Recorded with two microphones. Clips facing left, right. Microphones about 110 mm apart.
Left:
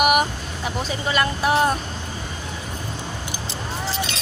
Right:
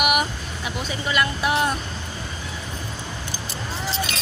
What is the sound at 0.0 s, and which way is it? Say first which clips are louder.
Vehicle: left 4 dB; 40° left (ahead or behind).